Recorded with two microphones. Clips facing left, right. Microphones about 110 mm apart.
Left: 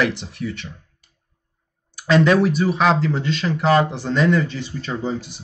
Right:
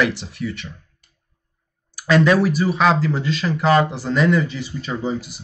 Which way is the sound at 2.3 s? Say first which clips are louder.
Even; 5° right (ahead or behind).